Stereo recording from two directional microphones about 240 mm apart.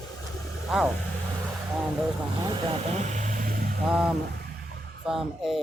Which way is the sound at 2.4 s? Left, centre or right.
Right.